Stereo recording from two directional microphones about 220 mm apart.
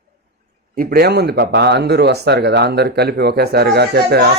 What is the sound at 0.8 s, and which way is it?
Speech, 45° right (ahead or behind).